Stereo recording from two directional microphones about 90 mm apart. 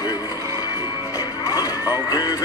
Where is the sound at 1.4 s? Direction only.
40° left (ahead or behind).